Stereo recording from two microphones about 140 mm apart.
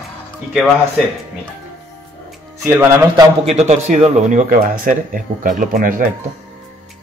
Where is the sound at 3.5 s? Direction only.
50° right (ahead or behind); by 6.0 s 75° right (ahead or behind).